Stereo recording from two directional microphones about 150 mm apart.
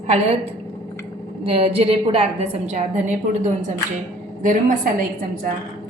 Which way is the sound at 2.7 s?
55° right (ahead or behind).